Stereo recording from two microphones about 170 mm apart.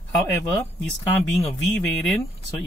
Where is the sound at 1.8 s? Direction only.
5° left (ahead or behind).